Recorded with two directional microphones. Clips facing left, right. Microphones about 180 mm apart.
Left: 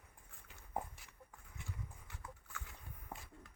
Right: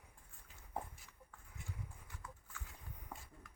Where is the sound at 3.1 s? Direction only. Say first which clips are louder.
Left 2 dB; 20° left (ahead or behind).